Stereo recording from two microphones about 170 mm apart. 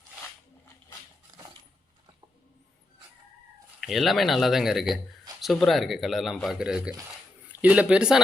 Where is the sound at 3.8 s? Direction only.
Centre (ahead or behind).